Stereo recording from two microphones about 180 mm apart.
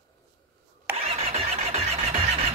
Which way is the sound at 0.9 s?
35° right (ahead or behind).